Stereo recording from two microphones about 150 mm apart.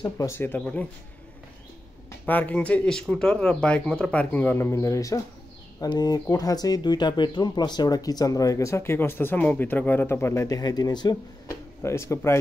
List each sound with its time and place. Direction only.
0.0 s a man's voice: 20° left (ahead or behind)
2.2 s a man's voice: 10° left (ahead or behind)